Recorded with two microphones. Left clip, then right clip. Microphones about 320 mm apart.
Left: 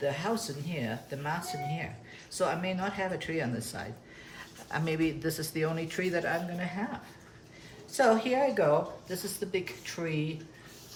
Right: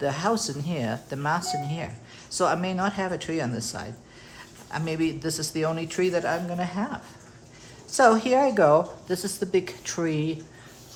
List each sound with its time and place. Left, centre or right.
0.0 s speech: centre
7.9 s speech: centre